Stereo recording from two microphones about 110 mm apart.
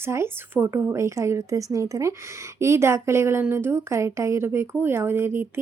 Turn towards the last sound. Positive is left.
turn(degrees=-20)  # may be behind; listen again after turning